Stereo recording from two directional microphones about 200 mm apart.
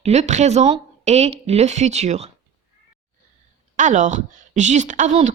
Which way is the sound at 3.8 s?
40° right (ahead or behind).